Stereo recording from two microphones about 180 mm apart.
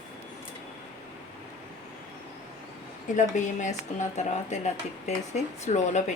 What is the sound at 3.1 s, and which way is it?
Speech, 45° left (ahead or behind).